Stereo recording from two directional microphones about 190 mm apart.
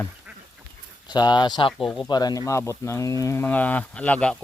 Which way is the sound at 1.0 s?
20° left (ahead or behind).